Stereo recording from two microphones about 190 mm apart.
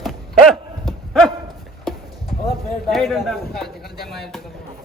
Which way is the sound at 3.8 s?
55° left (ahead or behind).